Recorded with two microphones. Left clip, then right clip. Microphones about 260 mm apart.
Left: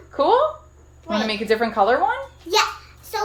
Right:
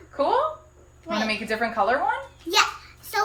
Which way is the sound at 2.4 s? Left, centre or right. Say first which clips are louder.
Left 2 dB; centre.